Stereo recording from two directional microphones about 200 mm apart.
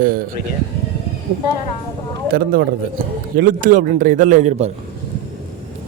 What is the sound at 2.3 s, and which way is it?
A man's voice, 45° right (ahead or behind).